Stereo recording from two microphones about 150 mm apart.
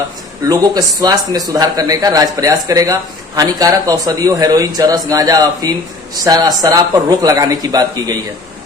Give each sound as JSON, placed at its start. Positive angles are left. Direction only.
{"t": 0.4, "sound": "speech", "side_deg": -25}